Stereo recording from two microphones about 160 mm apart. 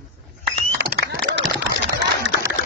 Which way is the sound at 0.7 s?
90° right.